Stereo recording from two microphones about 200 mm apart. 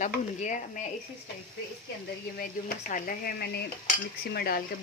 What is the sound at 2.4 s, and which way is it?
A woman's voice, 45° left (ahead or behind).